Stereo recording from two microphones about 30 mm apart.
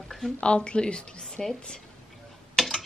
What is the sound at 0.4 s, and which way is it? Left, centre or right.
Speech, left.